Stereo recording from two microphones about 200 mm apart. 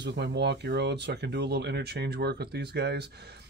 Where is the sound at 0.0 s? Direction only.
60° right (ahead or behind).